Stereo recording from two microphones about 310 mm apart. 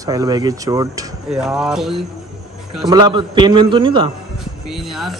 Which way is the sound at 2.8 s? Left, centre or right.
Centre.